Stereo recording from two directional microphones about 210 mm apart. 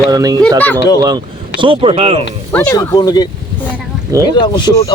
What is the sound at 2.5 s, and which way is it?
Speech, 15° left (ahead or behind).